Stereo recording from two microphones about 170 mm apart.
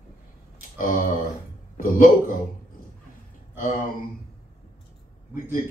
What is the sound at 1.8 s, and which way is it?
Speech, 55° left (ahead or behind).